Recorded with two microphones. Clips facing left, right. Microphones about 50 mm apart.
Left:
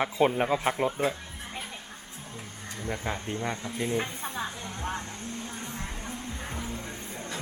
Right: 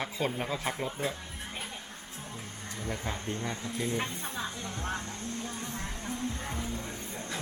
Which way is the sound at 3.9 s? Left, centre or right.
Centre.